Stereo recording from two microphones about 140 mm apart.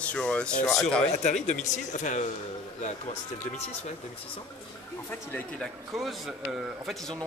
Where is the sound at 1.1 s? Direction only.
55° left (ahead or behind).